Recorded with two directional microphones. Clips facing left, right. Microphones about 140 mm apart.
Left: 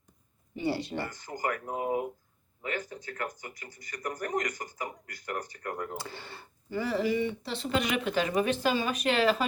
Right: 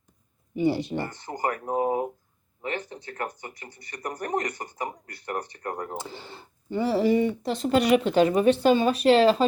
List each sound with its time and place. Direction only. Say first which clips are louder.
0.5 s speech: right 6 dB; 15° right (ahead or behind)
1.3 s speech: right 6 dB; 30° right (ahead or behind)
6.0 s speech: right 4 dB; 15° right (ahead or behind)